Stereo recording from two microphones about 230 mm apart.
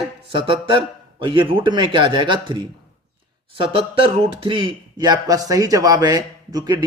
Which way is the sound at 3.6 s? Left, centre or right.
Right.